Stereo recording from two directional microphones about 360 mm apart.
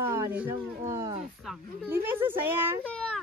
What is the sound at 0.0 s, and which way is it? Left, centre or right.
Speech, centre.